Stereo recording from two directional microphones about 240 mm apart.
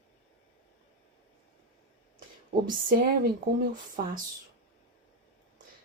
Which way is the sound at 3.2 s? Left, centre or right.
Right.